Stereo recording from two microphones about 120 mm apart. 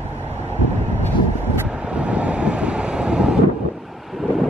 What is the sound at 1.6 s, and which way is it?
Wind noise, 10° right (ahead or behind).